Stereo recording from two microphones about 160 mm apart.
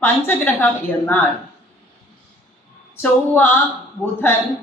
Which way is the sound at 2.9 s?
10° left (ahead or behind).